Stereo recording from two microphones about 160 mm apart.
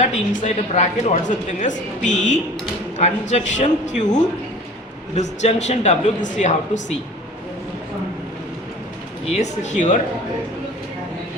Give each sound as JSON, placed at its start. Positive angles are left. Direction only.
{"t": 0.0, "sound": "speech", "side_deg": 45}
{"t": 9.3, "sound": "speech", "side_deg": 45}